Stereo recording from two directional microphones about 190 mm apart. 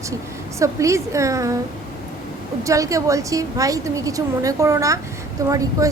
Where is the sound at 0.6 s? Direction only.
15° right (ahead or behind).